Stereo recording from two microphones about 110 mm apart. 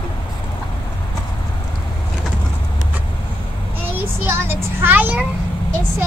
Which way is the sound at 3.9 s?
20° right (ahead or behind).